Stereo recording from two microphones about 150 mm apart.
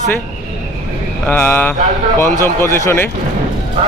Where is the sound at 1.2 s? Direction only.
10° left (ahead or behind).